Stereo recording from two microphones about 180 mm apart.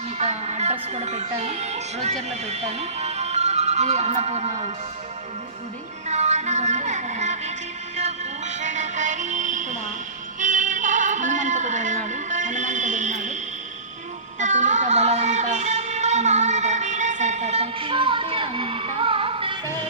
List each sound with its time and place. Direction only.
0.2 s music: 40° right (ahead or behind)
6.1 s a sound: 40° right (ahead or behind)
7.9 s music: 40° right (ahead or behind)
14.3 s music: 40° right (ahead or behind)